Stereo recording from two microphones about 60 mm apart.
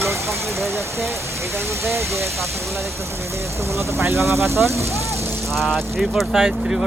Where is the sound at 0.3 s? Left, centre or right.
Centre.